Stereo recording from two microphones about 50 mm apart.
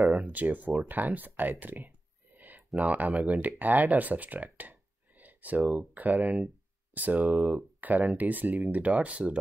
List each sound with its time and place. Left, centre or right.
0.2 s speech: right
0.8 s a sound: right
2.8 s speech: right